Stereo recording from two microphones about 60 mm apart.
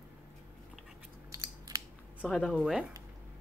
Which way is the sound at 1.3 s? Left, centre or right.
Right.